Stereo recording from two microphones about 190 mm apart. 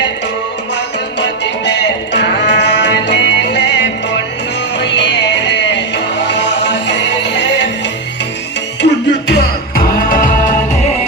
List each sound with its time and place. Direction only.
1.2 s music: 65° left (ahead or behind)
8.8 s music: 60° left (ahead or behind); by 10.5 s 45° left (ahead or behind)